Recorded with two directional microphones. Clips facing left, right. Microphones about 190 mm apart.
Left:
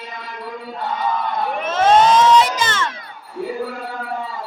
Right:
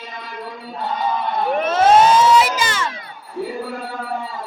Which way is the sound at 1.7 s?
10° right (ahead or behind).